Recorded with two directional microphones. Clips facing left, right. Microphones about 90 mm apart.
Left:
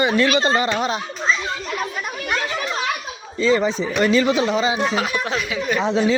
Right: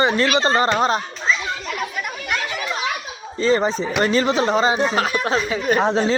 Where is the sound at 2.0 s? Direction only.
30° left (ahead or behind).